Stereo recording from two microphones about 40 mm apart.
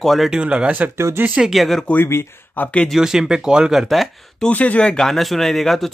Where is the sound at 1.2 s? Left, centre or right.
Right.